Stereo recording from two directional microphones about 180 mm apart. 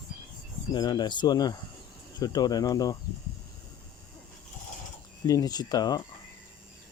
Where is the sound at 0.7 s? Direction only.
25° left (ahead or behind).